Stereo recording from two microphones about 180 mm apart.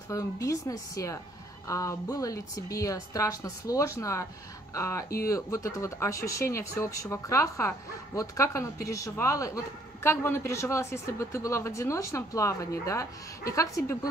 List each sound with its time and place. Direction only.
0.1 s speech: 15° left (ahead or behind)